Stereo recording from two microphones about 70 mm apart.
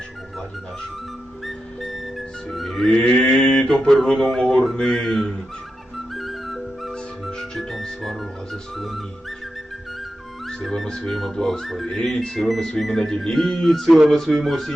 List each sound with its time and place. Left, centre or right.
1.5 s music: centre
2.9 s mantra: centre
6.1 s music: centre
10.6 s speech: centre